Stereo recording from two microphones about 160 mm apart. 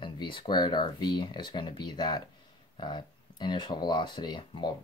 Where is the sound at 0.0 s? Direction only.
30° left (ahead or behind).